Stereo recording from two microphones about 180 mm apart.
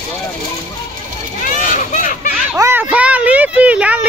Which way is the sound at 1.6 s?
45° left (ahead or behind).